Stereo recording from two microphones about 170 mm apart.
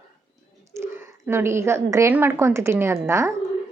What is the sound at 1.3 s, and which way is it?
A woman's voice, 15° right (ahead or behind).